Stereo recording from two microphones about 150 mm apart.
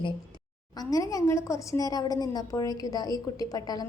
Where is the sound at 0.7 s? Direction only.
25° left (ahead or behind).